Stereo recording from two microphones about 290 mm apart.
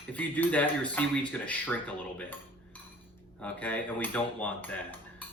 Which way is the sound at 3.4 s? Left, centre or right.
Centre.